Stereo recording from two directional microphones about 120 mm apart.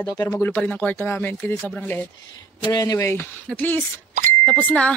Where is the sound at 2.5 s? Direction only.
35° left (ahead or behind).